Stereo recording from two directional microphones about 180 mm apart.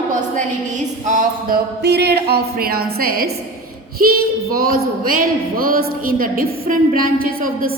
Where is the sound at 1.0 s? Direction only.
50° right (ahead or behind).